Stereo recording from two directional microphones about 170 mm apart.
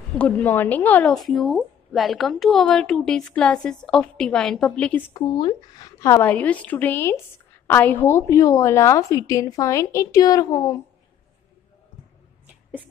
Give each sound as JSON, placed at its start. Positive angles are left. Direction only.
{"t": 0.1, "sound": "speech", "side_deg": 10}
{"t": 5.1, "sound": "a woman's voice", "side_deg": 25}